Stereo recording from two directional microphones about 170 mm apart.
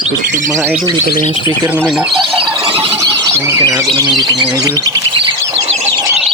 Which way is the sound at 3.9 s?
25° right (ahead or behind).